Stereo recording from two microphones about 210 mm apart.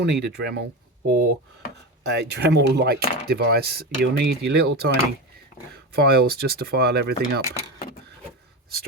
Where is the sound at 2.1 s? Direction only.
55° right (ahead or behind).